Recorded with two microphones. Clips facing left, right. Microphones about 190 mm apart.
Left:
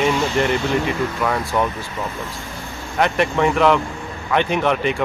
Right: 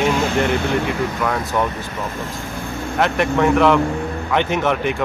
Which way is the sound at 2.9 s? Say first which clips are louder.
Even; centre (ahead or behind).